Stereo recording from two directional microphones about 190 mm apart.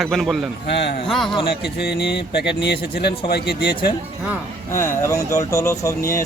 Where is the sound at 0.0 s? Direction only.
Centre (ahead or behind).